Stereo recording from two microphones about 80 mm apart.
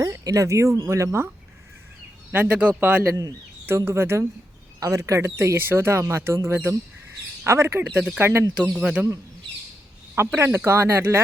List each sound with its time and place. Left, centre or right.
0.0 s speech: right
2.3 s speech: right
3.7 s speech: right
8.5 s speech: centre
10.2 s speech: right